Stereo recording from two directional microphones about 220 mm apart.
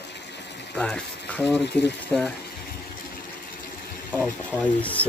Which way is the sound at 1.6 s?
50° left (ahead or behind).